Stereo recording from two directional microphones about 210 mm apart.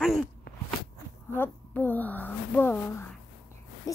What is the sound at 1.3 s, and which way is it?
A child's voice, 10° left (ahead or behind).